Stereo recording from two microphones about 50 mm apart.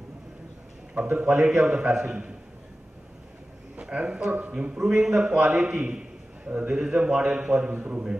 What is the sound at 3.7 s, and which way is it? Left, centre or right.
A man's voice, right.